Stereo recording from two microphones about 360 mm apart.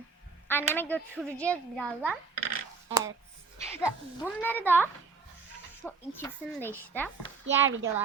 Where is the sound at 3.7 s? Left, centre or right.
Centre.